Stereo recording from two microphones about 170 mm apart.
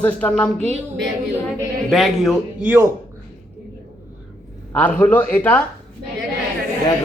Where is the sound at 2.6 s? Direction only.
10° right (ahead or behind).